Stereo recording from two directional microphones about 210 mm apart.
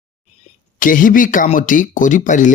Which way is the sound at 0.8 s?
40° left (ahead or behind).